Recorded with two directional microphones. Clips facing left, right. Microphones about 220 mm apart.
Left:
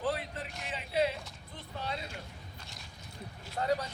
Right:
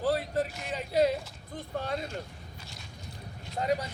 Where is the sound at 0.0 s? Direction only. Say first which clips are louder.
Right 7 dB; 40° right (ahead or behind).